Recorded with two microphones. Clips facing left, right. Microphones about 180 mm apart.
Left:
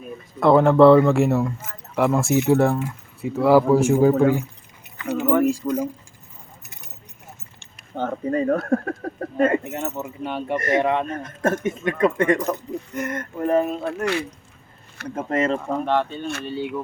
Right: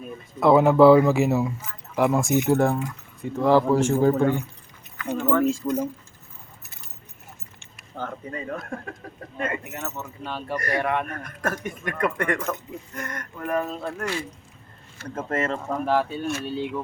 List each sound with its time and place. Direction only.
0.3 s speech: 5° right (ahead or behind)
8.1 s speech: 40° left (ahead or behind)
8.5 s speech: 55° left (ahead or behind)
9.4 s speech: 30° left (ahead or behind)
12.4 s speech: 35° left (ahead or behind)
12.9 s speech: 20° left (ahead or behind)
13.8 s speech: 65° left (ahead or behind)
15.1 s speech: 15° left (ahead or behind)
15.9 s speech: 5° right (ahead or behind)